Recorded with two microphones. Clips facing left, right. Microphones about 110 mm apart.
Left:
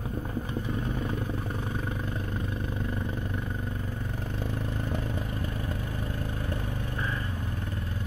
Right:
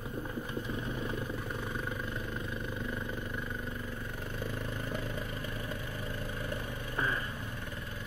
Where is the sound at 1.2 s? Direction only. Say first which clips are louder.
Left 4 dB; 40° left (ahead or behind).